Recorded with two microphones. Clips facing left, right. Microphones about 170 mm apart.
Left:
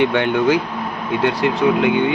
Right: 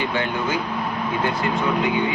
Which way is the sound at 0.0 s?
65° left (ahead or behind).